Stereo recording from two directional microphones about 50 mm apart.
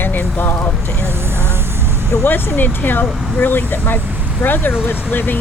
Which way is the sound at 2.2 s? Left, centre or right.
Left.